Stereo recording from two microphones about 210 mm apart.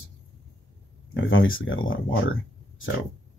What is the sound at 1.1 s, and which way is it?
Speech, 70° left (ahead or behind).